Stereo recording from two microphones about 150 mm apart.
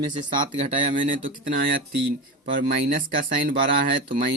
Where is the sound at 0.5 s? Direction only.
50° right (ahead or behind).